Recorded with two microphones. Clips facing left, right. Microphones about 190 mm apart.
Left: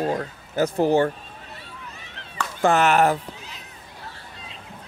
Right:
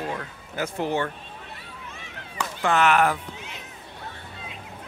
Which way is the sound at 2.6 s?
40° left (ahead or behind).